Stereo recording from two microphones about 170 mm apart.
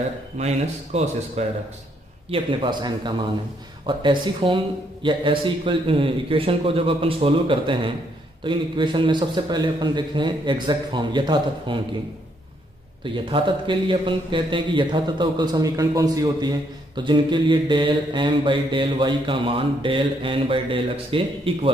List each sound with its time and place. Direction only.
0.4 s a man's voice: 40° right (ahead or behind)
2.3 s a man's voice: 30° right (ahead or behind)
13.0 s a man's voice: 30° right (ahead or behind)